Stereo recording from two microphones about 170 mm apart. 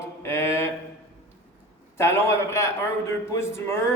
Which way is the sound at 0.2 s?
15° left (ahead or behind).